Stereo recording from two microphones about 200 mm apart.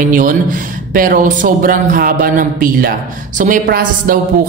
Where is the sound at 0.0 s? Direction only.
40° right (ahead or behind).